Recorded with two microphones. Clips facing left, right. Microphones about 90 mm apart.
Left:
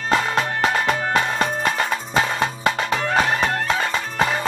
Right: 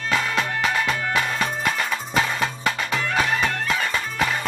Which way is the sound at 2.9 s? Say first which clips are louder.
Left 1 dB; 35° left (ahead or behind).